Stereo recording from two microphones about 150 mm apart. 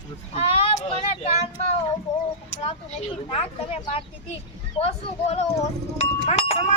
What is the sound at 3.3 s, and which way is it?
Speech, 40° left (ahead or behind).